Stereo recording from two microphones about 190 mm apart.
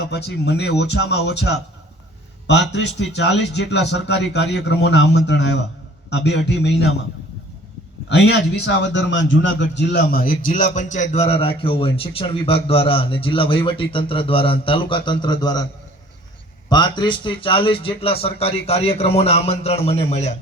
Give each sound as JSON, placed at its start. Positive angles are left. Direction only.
{"t": 0.0, "sound": "speech", "side_deg": 60}
{"t": 8.1, "sound": "speech", "side_deg": 65}
{"t": 9.9, "sound": "a man's voice", "side_deg": 50}
{"t": 16.6, "sound": "a man's voice", "side_deg": 20}